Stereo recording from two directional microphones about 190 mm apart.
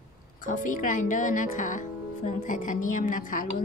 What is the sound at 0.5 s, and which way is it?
Speech, 45° left (ahead or behind).